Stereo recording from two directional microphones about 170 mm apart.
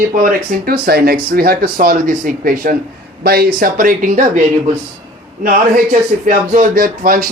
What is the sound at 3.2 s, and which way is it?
Speech, 65° right (ahead or behind).